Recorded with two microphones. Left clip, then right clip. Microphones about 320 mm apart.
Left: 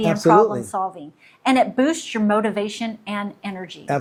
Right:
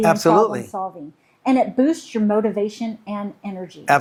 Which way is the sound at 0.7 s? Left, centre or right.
Left.